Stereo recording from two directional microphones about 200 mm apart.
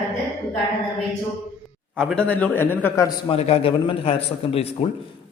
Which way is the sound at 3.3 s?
30° left (ahead or behind).